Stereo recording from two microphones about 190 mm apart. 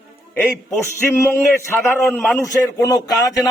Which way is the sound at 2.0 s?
Centre (ahead or behind).